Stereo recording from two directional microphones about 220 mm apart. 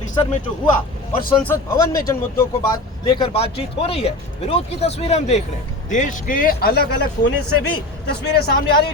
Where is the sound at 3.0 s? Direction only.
25° left (ahead or behind).